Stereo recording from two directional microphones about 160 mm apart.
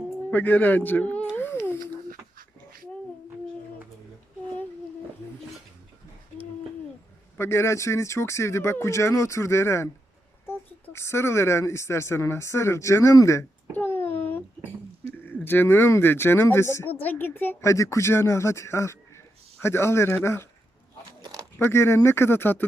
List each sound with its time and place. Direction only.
0.3 s speech: 10° left (ahead or behind)
1.4 s a sound: 15° left (ahead or behind)
7.3 s speech: 15° left (ahead or behind)
15.4 s speech: 15° left (ahead or behind)
21.2 s a sound: 25° right (ahead or behind)
21.6 s speech: 15° left (ahead or behind)